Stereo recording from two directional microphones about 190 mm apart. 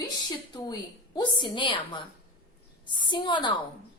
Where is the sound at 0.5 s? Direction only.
20° left (ahead or behind).